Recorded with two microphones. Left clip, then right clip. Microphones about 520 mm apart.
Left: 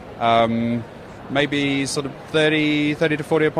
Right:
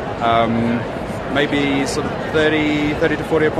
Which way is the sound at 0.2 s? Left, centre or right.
Left.